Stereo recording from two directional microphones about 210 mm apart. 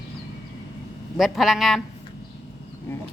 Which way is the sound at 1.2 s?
Centre (ahead or behind).